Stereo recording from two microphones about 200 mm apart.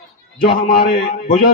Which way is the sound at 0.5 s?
45° left (ahead or behind).